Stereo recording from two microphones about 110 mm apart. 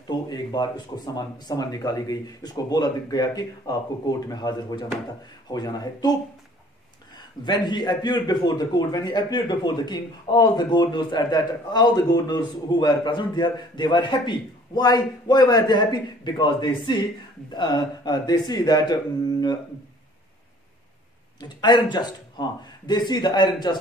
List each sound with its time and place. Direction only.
0.0 s a man's voice: 40° left (ahead or behind)
7.4 s a man's voice: 40° left (ahead or behind)
21.4 s a man's voice: 40° left (ahead or behind)